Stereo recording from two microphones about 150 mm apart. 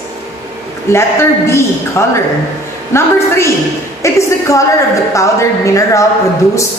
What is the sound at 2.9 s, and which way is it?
A woman's voice, 15° left (ahead or behind).